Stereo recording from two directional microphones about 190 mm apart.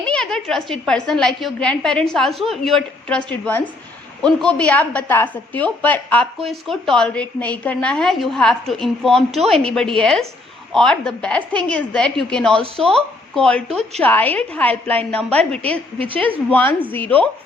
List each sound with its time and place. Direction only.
0.0 s a woman's voice: 5° left (ahead or behind)
12.6 s speech: 30° right (ahead or behind)
12.9 s a woman's voice: 5° left (ahead or behind)